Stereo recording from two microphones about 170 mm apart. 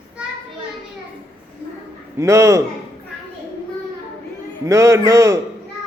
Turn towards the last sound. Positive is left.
turn(degrees=-15)  # may be behind; listen again after turning